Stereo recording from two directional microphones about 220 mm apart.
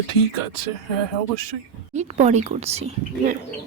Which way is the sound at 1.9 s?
30° right (ahead or behind).